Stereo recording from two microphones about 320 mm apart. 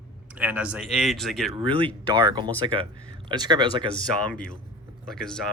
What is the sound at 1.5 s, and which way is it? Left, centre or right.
Speech, centre.